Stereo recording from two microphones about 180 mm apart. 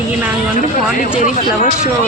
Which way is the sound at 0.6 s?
45° left (ahead or behind).